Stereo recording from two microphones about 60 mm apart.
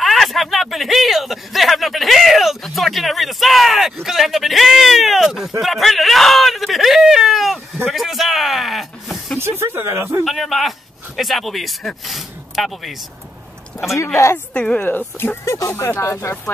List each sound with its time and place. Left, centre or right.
0.0 s speech: centre
5.6 s whimper: centre
9.4 s a sound: right
10.2 s speech: centre
13.9 s a woman's voice: left
14.5 s a woman's voice: centre
14.9 s speech: left
15.4 s a woman's voice: left